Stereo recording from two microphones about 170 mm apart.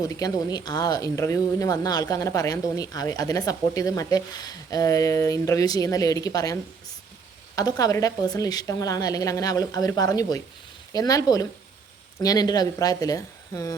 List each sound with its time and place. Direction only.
0.0 s speech: 20° left (ahead or behind)